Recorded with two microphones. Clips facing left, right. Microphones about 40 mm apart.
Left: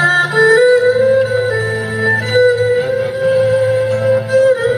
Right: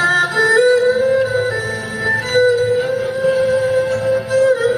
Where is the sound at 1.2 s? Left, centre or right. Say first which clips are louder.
Left 3 dB; centre.